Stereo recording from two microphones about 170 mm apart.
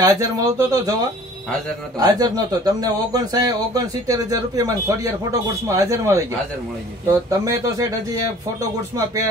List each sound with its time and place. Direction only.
0.0 s speech: 20° right (ahead or behind)
2.0 s speech: 25° right (ahead or behind)
7.2 s speech: 20° right (ahead or behind)